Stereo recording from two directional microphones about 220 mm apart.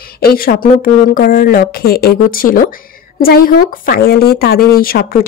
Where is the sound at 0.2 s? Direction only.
45° left (ahead or behind).